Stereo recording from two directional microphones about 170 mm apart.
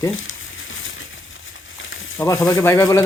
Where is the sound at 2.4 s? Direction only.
20° left (ahead or behind).